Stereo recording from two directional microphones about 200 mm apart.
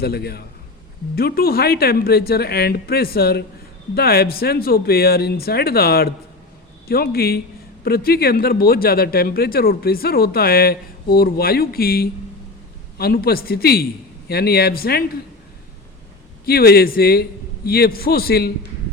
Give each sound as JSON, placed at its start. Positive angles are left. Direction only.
{"t": 0.0, "sound": "speech", "side_deg": 50}
{"t": 16.5, "sound": "speech", "side_deg": 50}